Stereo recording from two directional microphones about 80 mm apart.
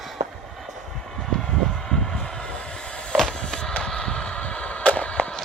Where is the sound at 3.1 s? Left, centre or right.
Centre.